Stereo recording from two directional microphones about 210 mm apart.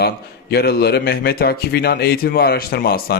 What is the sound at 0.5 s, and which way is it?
Speech, 50° left (ahead or behind).